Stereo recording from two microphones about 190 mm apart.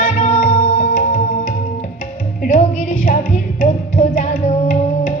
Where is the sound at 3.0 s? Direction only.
45° left (ahead or behind).